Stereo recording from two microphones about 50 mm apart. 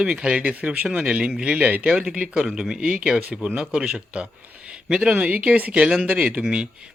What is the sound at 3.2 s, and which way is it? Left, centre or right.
Speech, right.